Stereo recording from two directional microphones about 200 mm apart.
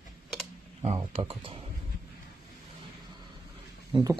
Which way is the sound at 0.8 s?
30° right (ahead or behind).